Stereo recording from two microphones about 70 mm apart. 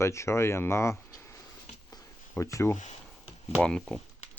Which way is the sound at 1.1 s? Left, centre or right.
Left.